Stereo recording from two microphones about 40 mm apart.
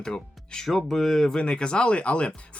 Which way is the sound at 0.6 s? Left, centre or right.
Centre.